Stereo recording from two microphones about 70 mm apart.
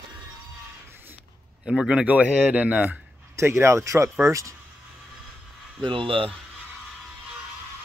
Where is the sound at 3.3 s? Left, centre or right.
Right.